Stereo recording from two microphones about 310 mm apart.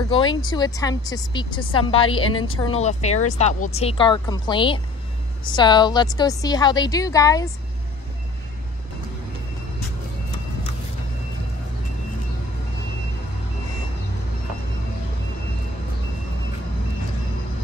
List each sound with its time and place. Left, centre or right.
0.1 s speech: centre